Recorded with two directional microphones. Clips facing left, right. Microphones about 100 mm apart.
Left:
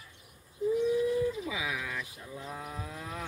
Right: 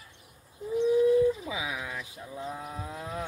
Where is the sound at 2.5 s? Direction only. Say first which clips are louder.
Right 1 dB; 15° right (ahead or behind).